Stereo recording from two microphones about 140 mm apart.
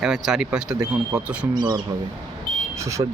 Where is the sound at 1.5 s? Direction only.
30° right (ahead or behind).